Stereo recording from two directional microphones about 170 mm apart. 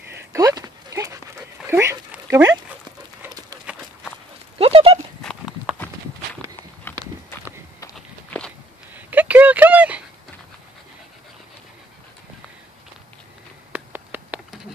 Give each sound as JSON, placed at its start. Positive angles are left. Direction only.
{"t": 0.3, "sound": "dog", "side_deg": -20}
{"t": 3.7, "sound": "run", "side_deg": -5}
{"t": 4.6, "sound": "horse", "side_deg": -35}
{"t": 5.2, "sound": "horse", "side_deg": 0}
{"t": 6.9, "sound": "horse", "side_deg": 15}
{"t": 7.9, "sound": "walk", "side_deg": 5}
{"t": 8.9, "sound": "a sound", "side_deg": -10}
{"t": 13.7, "sound": "a sound", "side_deg": -10}